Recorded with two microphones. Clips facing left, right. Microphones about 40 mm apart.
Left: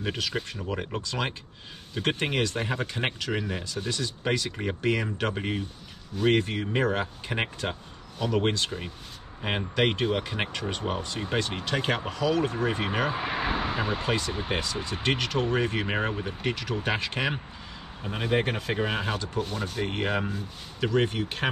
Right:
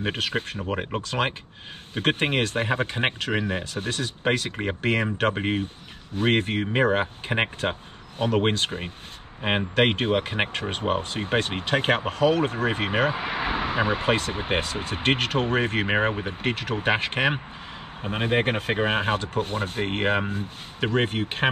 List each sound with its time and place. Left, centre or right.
0.0 s speech: right
3.6 s speech: right